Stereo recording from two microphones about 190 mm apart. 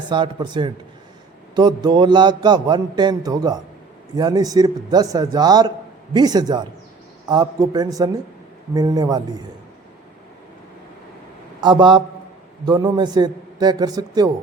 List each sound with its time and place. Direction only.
0.1 s a man's voice: 25° right (ahead or behind)
11.6 s a man's voice: 25° right (ahead or behind)